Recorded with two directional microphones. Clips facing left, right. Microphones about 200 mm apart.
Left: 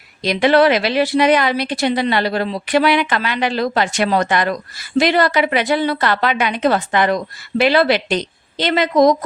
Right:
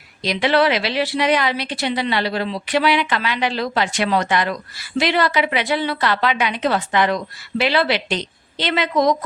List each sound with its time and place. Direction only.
0.2 s a woman's voice: 50° left (ahead or behind)